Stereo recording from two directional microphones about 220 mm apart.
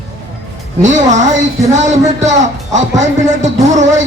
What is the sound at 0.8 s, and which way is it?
Speech, 35° right (ahead or behind).